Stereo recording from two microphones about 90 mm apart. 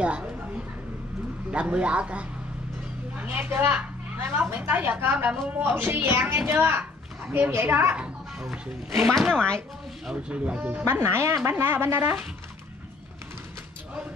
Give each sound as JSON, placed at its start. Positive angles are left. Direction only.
{"t": 1.5, "sound": "speech", "side_deg": -15}
{"t": 8.4, "sound": "speech", "side_deg": -5}
{"t": 9.3, "sound": "speech", "side_deg": 10}
{"t": 10.0, "sound": "speech", "side_deg": -10}
{"t": 10.8, "sound": "speech", "side_deg": -25}